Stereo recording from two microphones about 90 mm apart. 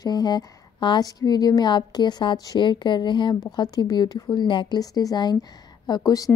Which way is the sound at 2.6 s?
60° left (ahead or behind).